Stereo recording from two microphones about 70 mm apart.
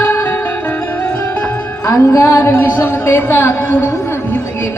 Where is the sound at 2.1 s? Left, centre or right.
Left.